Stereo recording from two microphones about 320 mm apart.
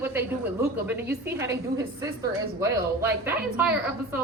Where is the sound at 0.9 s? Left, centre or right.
Centre.